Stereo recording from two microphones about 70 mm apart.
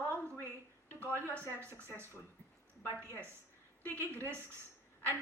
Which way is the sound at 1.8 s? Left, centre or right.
Right.